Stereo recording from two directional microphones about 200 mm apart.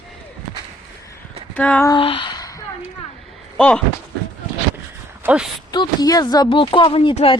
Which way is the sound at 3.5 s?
5° left (ahead or behind).